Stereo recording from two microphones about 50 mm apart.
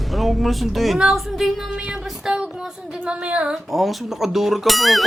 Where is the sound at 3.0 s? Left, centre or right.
Right.